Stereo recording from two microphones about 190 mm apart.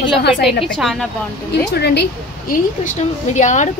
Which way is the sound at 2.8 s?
40° left (ahead or behind).